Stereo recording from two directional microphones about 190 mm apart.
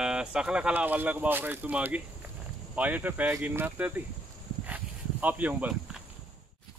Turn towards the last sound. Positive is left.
turn(degrees=-5)  # may be behind; listen again after turning